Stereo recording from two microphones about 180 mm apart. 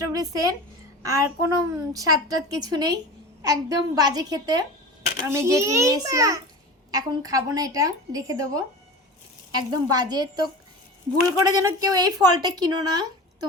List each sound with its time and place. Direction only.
0.1 s a child's voice: 20° right (ahead or behind)
11.6 s a child's voice: 20° right (ahead or behind)